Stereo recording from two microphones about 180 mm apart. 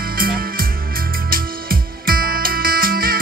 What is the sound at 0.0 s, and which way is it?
Music, 55° right (ahead or behind).